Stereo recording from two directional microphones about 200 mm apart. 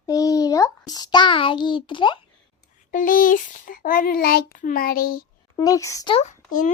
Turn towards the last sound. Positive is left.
turn(degrees=40)  # may be behind; listen again after turning